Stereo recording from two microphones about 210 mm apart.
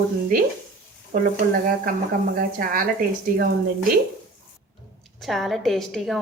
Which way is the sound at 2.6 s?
40° right (ahead or behind).